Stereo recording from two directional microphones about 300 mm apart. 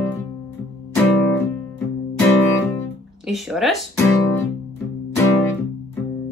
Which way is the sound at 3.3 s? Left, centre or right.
Centre.